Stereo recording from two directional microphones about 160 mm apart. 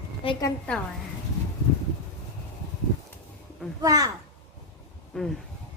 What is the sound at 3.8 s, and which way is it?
Speech, 20° right (ahead or behind).